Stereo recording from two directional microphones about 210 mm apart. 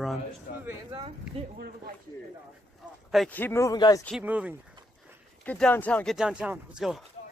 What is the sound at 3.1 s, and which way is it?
Speech, 5° left (ahead or behind).